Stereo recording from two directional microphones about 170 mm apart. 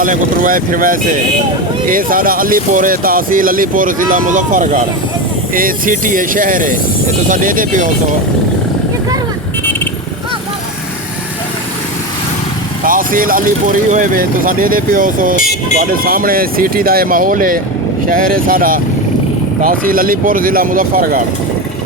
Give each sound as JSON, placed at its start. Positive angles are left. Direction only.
{"t": 0.0, "sound": "speech", "side_deg": -50}
{"t": 12.8, "sound": "speech", "side_deg": -55}